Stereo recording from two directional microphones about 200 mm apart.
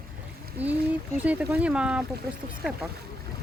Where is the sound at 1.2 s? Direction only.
5° right (ahead or behind).